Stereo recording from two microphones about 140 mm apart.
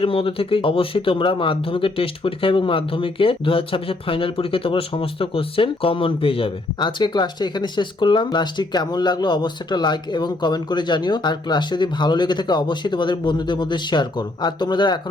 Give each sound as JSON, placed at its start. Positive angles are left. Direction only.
{"t": 0.0, "sound": "speech", "side_deg": 40}